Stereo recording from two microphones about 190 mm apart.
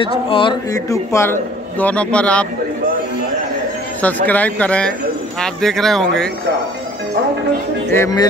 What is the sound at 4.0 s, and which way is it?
Speech, 10° left (ahead or behind).